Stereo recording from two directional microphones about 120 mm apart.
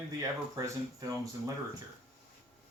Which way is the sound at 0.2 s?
30° right (ahead or behind).